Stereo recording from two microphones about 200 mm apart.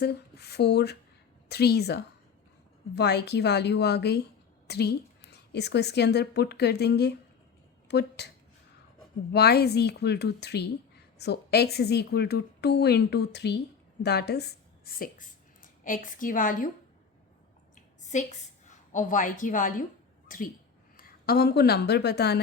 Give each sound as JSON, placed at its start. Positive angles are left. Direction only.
{"t": 0.0, "sound": "a woman's voice", "side_deg": 55}
{"t": 9.3, "sound": "a woman's voice", "side_deg": 55}
{"t": 18.1, "sound": "a woman's voice", "side_deg": 35}